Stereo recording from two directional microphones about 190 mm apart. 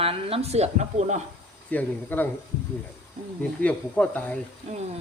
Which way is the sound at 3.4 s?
5° left (ahead or behind).